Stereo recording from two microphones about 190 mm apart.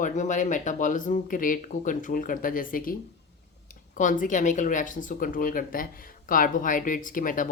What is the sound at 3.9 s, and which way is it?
Speech, 45° left (ahead or behind).